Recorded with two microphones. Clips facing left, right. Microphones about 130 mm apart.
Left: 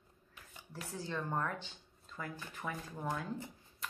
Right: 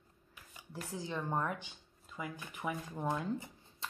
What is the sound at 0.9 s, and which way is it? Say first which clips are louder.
Speech: right 1 dB; 15° right (ahead or behind).